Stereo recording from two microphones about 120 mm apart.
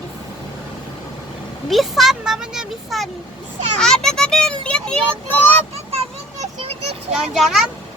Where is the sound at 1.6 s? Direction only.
Centre (ahead or behind).